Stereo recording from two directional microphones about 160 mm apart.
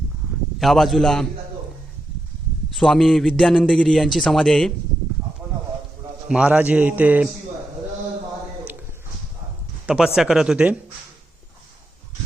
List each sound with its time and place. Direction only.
0.6 s a man's voice: centre (ahead or behind)
2.7 s a man's voice: centre (ahead or behind)
6.2 s a man's voice: 5° right (ahead or behind)
9.8 s a man's voice: 5° right (ahead or behind)